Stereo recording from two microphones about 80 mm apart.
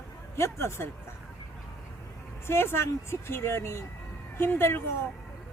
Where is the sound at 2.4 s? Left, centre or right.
Left.